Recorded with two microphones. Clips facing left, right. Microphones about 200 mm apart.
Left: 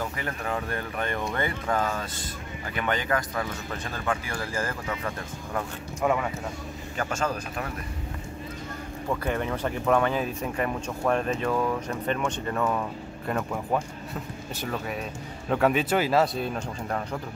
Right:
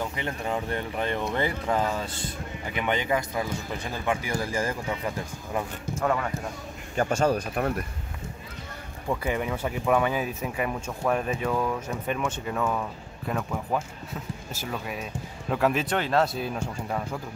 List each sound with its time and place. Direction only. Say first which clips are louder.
0.0 s speech: right 1 dB; 25° right (ahead or behind)
5.9 s speech: left 1 dB; 5° left (ahead or behind)
7.0 s speech: right 6 dB; 35° right (ahead or behind)
9.1 s speech: even; 10° right (ahead or behind)